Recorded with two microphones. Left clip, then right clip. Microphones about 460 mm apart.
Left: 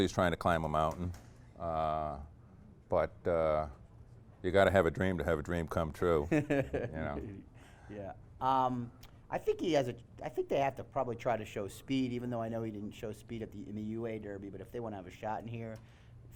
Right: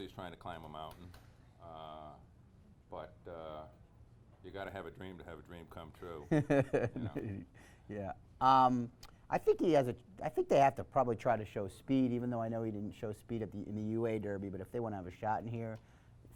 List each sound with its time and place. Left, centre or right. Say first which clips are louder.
0.0 s speech: left 16 dB; left
6.2 s speech: even; right